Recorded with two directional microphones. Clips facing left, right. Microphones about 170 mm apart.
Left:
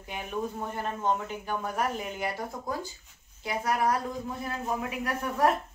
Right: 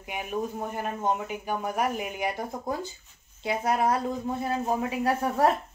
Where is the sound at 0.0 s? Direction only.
10° right (ahead or behind); by 5.5 s 30° right (ahead or behind).